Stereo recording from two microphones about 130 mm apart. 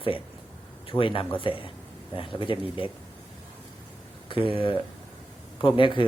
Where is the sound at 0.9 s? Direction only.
45° left (ahead or behind).